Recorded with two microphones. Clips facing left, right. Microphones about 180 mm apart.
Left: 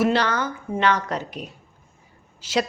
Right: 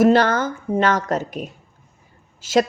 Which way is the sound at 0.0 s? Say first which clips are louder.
Right 6 dB; 45° right (ahead or behind).